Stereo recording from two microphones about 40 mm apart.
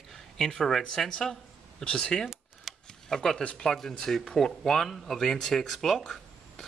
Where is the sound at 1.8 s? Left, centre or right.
Left.